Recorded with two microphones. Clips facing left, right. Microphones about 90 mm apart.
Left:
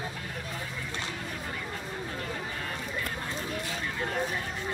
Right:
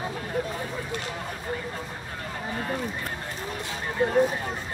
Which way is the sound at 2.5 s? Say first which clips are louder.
Right 6 dB; 35° right (ahead or behind).